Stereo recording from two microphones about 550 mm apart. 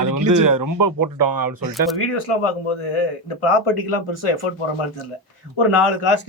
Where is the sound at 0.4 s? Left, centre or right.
Right.